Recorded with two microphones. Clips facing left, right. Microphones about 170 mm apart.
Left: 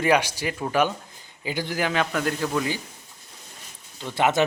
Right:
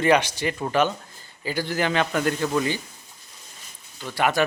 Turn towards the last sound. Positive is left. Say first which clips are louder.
# left 1 dB
turn(degrees=20)  # may be behind; listen again after turning